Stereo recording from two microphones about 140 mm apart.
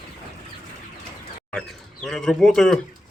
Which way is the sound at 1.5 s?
Centre (ahead or behind).